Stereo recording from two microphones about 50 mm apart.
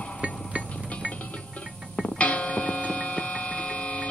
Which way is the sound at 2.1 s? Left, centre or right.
Left.